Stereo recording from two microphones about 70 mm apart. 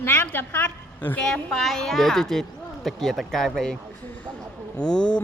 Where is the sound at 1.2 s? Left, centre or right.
Centre.